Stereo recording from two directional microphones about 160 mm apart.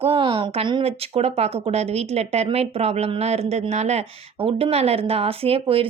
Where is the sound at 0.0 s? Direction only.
35° right (ahead or behind).